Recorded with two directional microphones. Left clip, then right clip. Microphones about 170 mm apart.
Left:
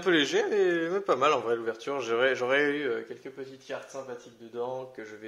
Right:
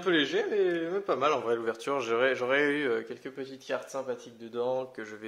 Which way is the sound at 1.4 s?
15° right (ahead or behind).